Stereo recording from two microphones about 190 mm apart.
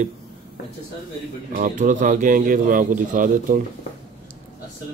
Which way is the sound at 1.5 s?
45° right (ahead or behind).